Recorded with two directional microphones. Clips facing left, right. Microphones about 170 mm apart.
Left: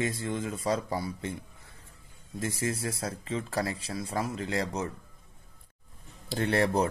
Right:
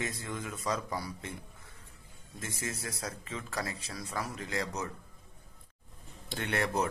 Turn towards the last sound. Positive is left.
turn(degrees=30)  # may be behind; listen again after turning